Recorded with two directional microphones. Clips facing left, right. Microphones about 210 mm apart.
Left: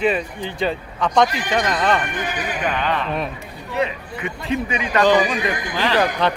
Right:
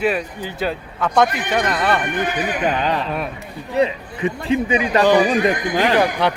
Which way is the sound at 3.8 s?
30° right (ahead or behind).